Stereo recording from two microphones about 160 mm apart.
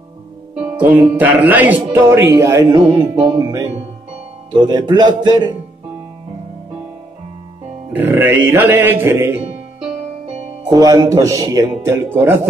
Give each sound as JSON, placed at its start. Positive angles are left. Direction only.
{"t": 0.7, "sound": "speech", "side_deg": -10}
{"t": 7.9, "sound": "speech", "side_deg": -10}
{"t": 9.8, "sound": "music", "side_deg": -35}
{"t": 10.7, "sound": "speech", "side_deg": -25}